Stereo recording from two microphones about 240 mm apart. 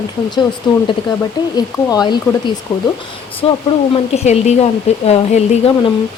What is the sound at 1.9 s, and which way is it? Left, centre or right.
Speech, centre.